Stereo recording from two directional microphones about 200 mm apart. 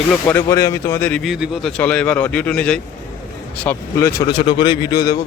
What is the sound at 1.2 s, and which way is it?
Speech, centre (ahead or behind).